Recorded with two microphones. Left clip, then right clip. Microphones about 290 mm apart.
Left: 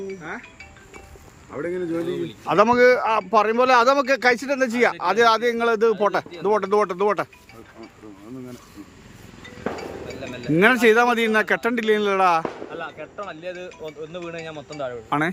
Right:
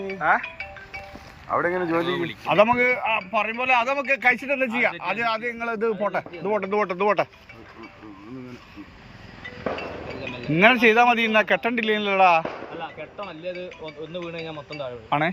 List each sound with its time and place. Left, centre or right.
0.2 s speech: right
1.5 s speech: centre
10.5 s speech: centre
14.1 s speech: left
15.1 s speech: centre